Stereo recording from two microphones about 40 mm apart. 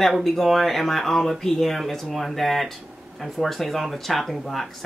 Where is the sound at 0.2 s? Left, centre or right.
Centre.